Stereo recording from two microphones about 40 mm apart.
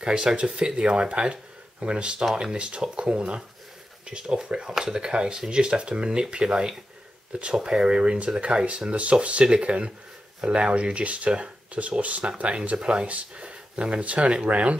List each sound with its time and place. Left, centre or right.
0.0 s speech: right
12.0 s speech: right